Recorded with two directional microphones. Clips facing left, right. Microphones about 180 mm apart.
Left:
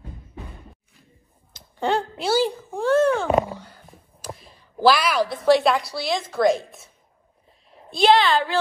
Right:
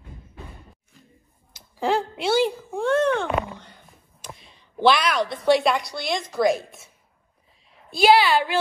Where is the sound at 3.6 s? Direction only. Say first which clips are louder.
Left 3 dB; centre (ahead or behind).